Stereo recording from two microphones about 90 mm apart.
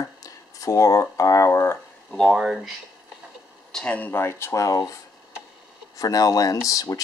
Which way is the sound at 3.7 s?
10° left (ahead or behind).